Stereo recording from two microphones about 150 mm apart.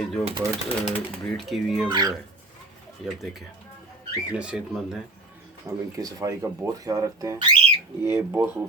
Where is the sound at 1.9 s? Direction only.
25° right (ahead or behind).